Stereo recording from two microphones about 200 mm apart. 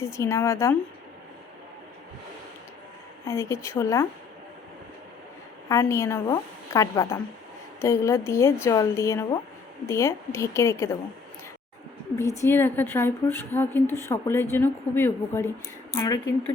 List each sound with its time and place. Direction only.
0.0 s a woman's voice: 15° left (ahead or behind)
3.2 s a woman's voice: 15° left (ahead or behind)
5.6 s a woman's voice: 15° left (ahead or behind)
12.1 s a woman's voice: 15° left (ahead or behind)